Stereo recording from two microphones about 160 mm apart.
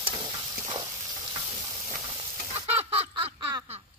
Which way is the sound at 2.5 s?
40° right (ahead or behind).